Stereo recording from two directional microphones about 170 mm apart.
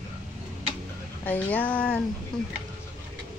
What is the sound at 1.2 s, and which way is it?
Speech, 10° left (ahead or behind).